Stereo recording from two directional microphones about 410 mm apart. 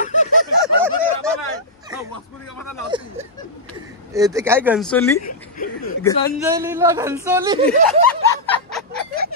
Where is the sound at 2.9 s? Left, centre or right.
Centre.